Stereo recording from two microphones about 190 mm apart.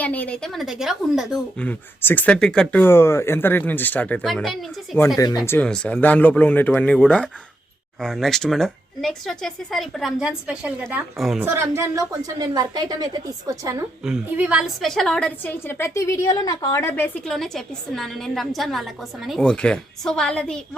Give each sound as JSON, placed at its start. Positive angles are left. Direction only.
{"t": 0.0, "sound": "speech", "side_deg": 10}
{"t": 5.1, "sound": "speech", "side_deg": 20}
{"t": 5.5, "sound": "a woman's voice", "side_deg": 5}
{"t": 14.0, "sound": "a woman's voice", "side_deg": -5}